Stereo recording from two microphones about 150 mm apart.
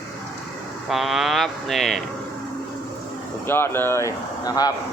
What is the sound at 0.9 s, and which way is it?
Speech, centre (ahead or behind).